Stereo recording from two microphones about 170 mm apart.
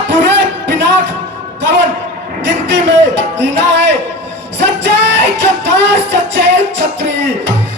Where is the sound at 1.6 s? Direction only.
90° right.